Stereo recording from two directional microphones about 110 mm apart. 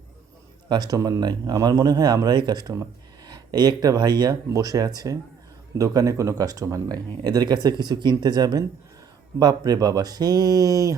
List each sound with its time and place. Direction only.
0.7 s speech: 35° right (ahead or behind)